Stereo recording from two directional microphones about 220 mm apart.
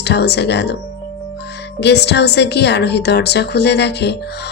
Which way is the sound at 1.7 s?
50° left (ahead or behind).